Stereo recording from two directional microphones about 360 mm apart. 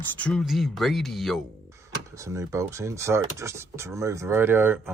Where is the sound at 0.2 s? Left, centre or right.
Centre.